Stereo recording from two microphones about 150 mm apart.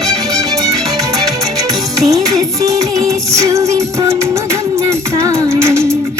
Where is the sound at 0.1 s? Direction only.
20° right (ahead or behind).